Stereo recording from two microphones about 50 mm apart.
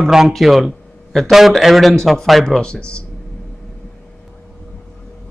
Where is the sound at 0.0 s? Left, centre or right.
Centre.